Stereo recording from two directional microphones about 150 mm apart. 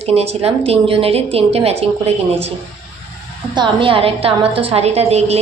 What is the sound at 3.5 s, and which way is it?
A woman's voice, 30° right (ahead or behind).